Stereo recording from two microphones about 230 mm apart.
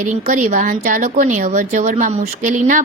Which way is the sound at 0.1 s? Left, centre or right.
Right.